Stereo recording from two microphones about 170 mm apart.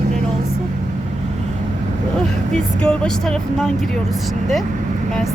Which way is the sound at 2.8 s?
5° left (ahead or behind).